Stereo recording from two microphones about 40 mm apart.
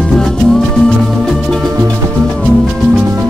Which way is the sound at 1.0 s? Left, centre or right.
Centre.